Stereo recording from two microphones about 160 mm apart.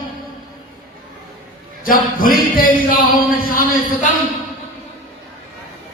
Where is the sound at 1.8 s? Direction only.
60° left (ahead or behind).